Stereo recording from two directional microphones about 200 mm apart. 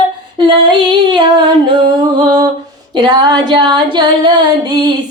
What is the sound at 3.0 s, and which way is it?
Female singing, 20° right (ahead or behind).